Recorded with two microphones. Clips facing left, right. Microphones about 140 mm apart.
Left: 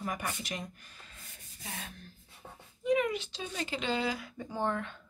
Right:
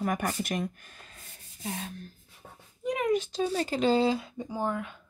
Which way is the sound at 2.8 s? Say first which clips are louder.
Right 2 dB; 45° right (ahead or behind).